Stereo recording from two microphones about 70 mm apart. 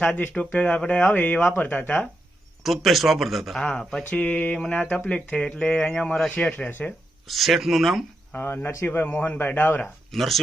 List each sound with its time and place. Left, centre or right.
0.2 s speech: left
2.6 s speech: centre
6.7 s speech: left
7.3 s speech: centre
8.3 s speech: left
10.1 s speech: centre